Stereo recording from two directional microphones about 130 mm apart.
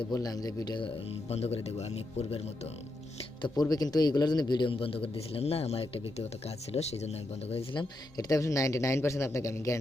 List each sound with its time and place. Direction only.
0.1 s speech: 30° left (ahead or behind)
1.3 s speech: 50° left (ahead or behind)
3.4 s a man's voice: 30° left (ahead or behind); by 7.6 s 55° left (ahead or behind)
7.7 s speech: 35° left (ahead or behind)